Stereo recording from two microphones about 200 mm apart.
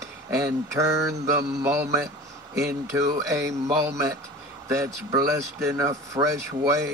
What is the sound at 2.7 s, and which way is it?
Speech, 15° right (ahead or behind).